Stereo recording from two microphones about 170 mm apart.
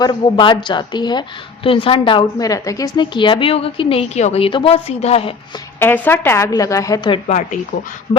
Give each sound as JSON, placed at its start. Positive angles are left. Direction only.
{"t": 0.0, "sound": "a woman's voice", "side_deg": 25}
{"t": 5.8, "sound": "a woman's voice", "side_deg": 10}
{"t": 7.3, "sound": "speech", "side_deg": 45}